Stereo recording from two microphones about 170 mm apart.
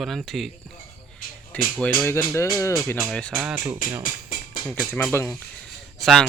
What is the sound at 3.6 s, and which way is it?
Speech, 25° right (ahead or behind).